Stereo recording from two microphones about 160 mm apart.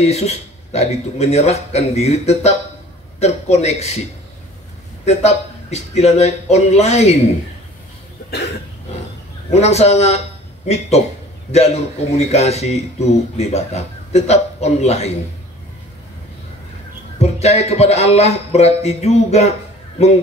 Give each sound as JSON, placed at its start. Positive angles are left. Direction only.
{"t": 0.0, "sound": "speech", "side_deg": 40}
{"t": 5.0, "sound": "speech", "side_deg": 40}
{"t": 9.5, "sound": "speech", "side_deg": 45}
{"t": 11.5, "sound": "speech", "side_deg": 40}
{"t": 17.2, "sound": "speech", "side_deg": 40}